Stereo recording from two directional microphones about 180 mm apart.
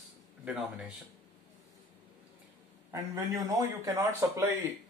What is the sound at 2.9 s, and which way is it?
Speech, 20° right (ahead or behind).